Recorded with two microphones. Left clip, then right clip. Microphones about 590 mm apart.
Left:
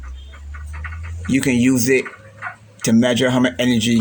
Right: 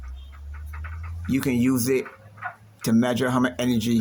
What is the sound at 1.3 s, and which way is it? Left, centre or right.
Speech, right.